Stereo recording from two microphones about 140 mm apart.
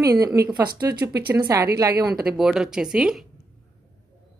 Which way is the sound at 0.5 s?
30° right (ahead or behind).